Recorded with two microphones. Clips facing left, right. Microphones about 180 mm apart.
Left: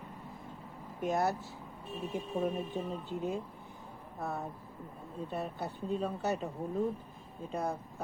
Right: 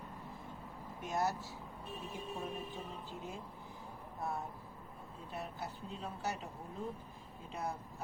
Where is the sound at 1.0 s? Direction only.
55° left (ahead or behind).